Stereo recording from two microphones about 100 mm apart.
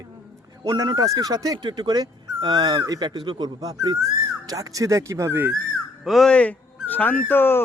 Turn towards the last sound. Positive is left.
turn(degrees=20)  # may be behind; listen again after turning